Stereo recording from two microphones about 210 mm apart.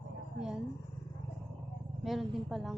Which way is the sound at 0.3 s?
5° right (ahead or behind).